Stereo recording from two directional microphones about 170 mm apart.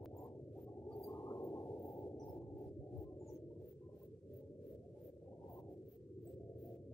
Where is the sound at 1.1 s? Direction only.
15° left (ahead or behind).